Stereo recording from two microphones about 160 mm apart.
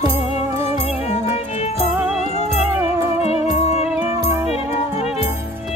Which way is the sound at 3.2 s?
40° left (ahead or behind).